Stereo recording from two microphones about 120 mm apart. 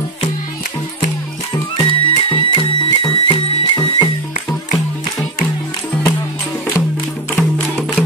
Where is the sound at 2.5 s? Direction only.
45° left (ahead or behind).